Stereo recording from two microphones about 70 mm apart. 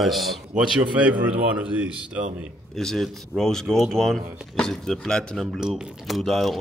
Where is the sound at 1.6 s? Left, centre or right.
Centre.